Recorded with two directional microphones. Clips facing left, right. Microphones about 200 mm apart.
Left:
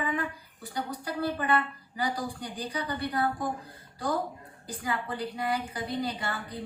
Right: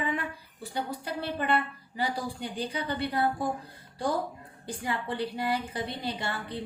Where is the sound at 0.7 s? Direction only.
25° right (ahead or behind).